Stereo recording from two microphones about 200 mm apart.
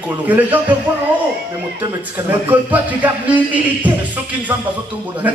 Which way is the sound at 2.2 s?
10° right (ahead or behind).